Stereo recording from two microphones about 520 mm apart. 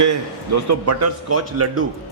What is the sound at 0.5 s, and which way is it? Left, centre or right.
Speech, right.